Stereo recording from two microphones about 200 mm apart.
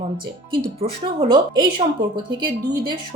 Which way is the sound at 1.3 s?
25° right (ahead or behind).